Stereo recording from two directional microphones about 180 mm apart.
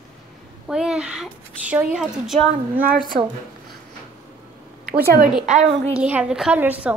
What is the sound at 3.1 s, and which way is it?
Speech, 40° right (ahead or behind).